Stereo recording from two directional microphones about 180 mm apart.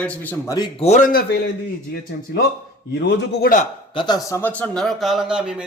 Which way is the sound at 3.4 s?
45° left (ahead or behind).